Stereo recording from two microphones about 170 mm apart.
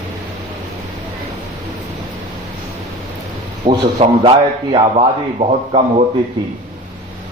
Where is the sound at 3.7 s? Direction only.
30° right (ahead or behind).